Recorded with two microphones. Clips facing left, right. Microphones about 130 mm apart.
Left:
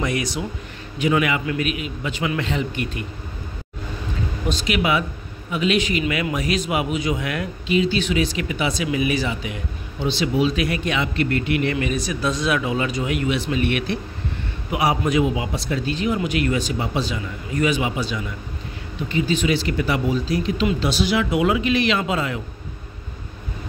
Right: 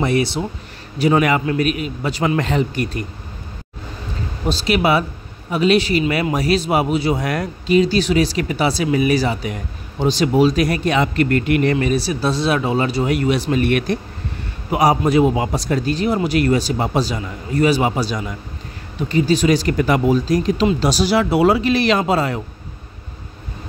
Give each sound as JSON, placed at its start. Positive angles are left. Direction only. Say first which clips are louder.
{"t": 0.0, "sound": "a man's voice", "louder": "right 6 dB", "side_deg": -30}
{"t": 4.5, "sound": "a man's voice", "louder": "right 5 dB", "side_deg": -35}
{"t": 11.7, "sound": "a man's voice", "louder": "right 5 dB", "side_deg": -35}